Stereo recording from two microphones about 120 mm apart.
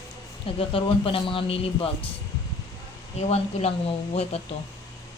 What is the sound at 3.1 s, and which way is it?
Speech, 60° left (ahead or behind).